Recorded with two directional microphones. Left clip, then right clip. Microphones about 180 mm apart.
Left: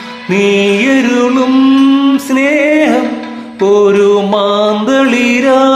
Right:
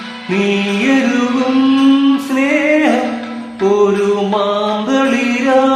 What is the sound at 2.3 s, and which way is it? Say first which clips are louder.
Music: left 4 dB; 40° left (ahead or behind).